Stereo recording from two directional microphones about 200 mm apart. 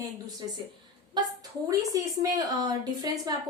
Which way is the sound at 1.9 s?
20° right (ahead or behind).